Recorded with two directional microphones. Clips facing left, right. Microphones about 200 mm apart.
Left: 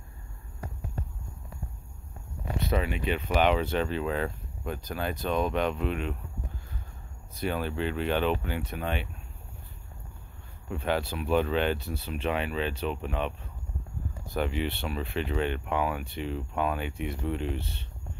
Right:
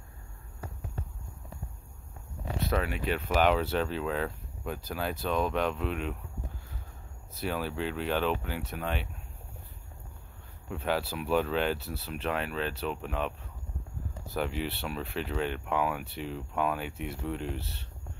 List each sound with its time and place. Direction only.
2.6 s speech: centre (ahead or behind)
7.3 s speech: 5° right (ahead or behind)
10.7 s speech: 5° right (ahead or behind)